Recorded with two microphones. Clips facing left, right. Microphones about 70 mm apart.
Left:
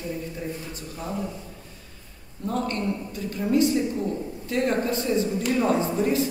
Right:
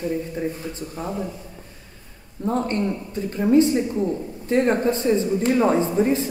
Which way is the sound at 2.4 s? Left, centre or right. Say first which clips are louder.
Right 4 dB; right.